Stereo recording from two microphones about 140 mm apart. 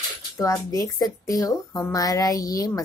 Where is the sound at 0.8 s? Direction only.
25° left (ahead or behind).